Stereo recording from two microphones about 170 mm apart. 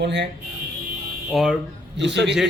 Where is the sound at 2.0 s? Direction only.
90° right.